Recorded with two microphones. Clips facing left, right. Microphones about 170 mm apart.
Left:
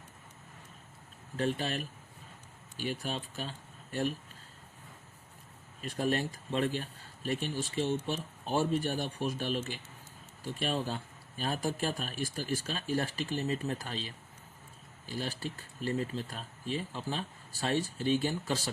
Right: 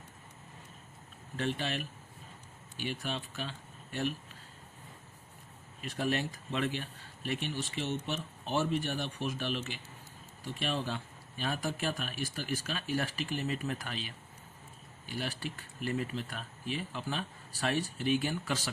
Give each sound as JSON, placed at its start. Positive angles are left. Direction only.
{"t": 1.4, "sound": "speech", "side_deg": 40}
{"t": 5.8, "sound": "speech", "side_deg": 40}
{"t": 15.1, "sound": "speech", "side_deg": 35}